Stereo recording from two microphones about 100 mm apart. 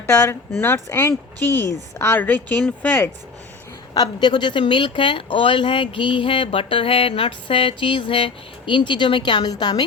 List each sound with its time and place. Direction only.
0.1 s speech: 20° left (ahead or behind)
3.9 s speech: 45° left (ahead or behind)